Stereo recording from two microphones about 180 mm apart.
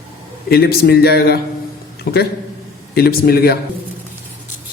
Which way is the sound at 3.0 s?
60° left (ahead or behind).